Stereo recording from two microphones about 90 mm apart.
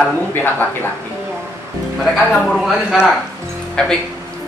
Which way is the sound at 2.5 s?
Centre (ahead or behind).